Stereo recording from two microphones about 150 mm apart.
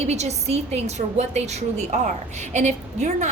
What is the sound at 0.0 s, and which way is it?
A woman's voice, 45° right (ahead or behind).